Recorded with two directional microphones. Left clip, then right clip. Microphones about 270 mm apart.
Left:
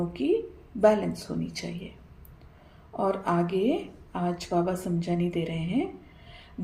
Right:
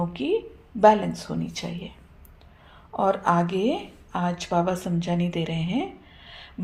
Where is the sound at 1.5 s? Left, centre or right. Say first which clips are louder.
Right 3 dB; right.